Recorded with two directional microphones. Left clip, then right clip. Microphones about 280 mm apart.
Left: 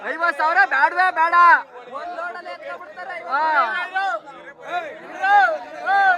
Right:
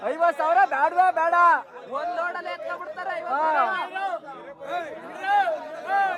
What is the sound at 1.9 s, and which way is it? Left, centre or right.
Chatter, right.